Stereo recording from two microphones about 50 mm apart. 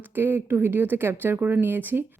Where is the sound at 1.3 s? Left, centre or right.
Right.